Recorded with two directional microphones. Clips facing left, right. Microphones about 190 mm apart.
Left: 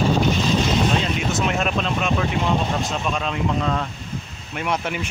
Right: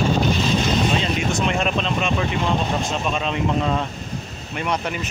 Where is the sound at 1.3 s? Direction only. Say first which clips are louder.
Left 1 dB; centre (ahead or behind).